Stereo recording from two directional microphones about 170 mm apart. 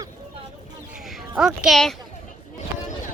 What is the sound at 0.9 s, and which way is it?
Speech, centre (ahead or behind).